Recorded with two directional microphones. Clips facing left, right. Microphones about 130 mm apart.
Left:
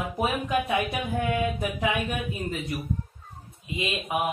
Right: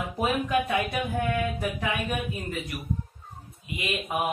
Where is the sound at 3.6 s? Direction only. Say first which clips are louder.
Left 4 dB; 25° left (ahead or behind).